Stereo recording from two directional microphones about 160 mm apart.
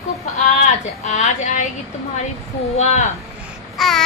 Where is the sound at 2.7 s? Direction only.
45° left (ahead or behind).